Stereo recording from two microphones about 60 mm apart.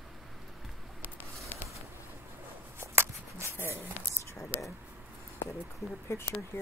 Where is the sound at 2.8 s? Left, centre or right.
Right.